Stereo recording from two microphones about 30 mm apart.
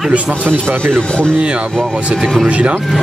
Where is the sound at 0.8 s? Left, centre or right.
Left.